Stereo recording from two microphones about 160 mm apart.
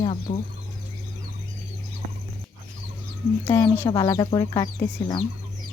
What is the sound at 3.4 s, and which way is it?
Speech, 15° left (ahead or behind).